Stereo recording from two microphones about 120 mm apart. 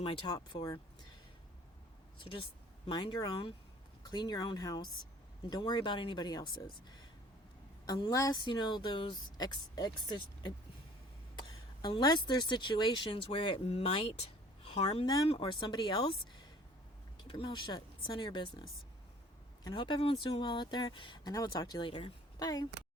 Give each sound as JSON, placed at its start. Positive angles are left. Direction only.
{"t": 0.0, "sound": "speech", "side_deg": 50}
{"t": 0.3, "sound": "a woman's voice", "side_deg": 35}
{"t": 2.1, "sound": "a woman's voice", "side_deg": 45}
{"t": 7.9, "sound": "a woman's voice", "side_deg": 40}
{"t": 14.6, "sound": "a sound", "side_deg": 55}
{"t": 15.0, "sound": "a woman's voice", "side_deg": 35}
{"t": 15.3, "sound": "a woman's voice", "side_deg": 45}
{"t": 17.2, "sound": "a woman's voice", "side_deg": 45}
{"t": 19.6, "sound": "a woman's voice", "side_deg": 40}
{"t": 22.4, "sound": "speech", "side_deg": 35}